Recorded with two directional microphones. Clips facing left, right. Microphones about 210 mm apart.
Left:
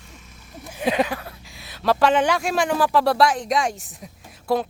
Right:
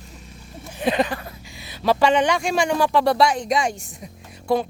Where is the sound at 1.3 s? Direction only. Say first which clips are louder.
Right 3 dB; centre (ahead or behind).